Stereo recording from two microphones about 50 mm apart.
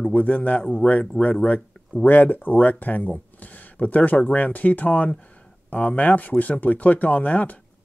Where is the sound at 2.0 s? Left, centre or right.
Left.